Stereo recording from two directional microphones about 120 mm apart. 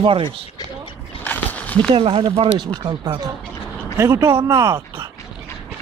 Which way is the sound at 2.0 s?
45° right (ahead or behind).